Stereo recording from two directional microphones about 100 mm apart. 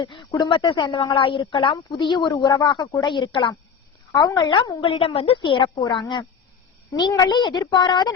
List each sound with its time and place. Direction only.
0.0 s a woman's voice: 55° left (ahead or behind)
0.3 s speech: 40° left (ahead or behind)
0.5 s speech: 50° left (ahead or behind)
4.8 s a woman's voice: 70° left (ahead or behind); by 8.1 s 45° left (ahead or behind)